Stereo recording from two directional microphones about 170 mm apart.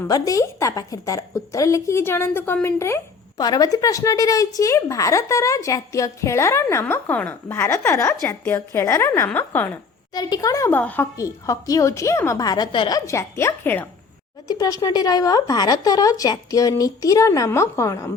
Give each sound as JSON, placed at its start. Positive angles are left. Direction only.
{"t": 0.1, "sound": "a woman's voice", "side_deg": 20}
{"t": 10.2, "sound": "speech", "side_deg": 25}
{"t": 13.1, "sound": "a woman's voice", "side_deg": 15}